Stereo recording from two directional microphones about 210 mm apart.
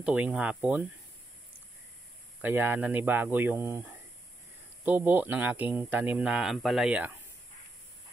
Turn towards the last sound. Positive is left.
turn(degrees=-5)  # may be behind; listen again after turning